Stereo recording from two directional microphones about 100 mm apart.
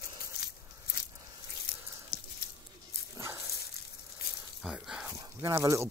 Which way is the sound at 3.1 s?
30° right (ahead or behind).